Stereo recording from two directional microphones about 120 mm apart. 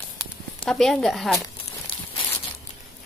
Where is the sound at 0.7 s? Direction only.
5° left (ahead or behind).